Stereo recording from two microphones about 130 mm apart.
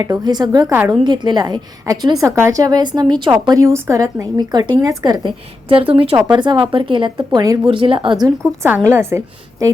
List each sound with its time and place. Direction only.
0.0 s a woman's voice: 30° right (ahead or behind)
5.6 s a woman's voice: 45° right (ahead or behind)
7.3 s a woman's voice: 25° right (ahead or behind)
7.7 s a woman's voice: 40° right (ahead or behind)
8.6 s a woman's voice: 15° right (ahead or behind)